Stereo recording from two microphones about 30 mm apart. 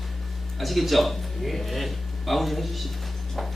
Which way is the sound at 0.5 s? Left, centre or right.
Centre.